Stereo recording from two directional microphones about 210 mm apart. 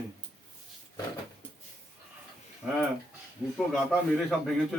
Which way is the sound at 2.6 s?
5° right (ahead or behind).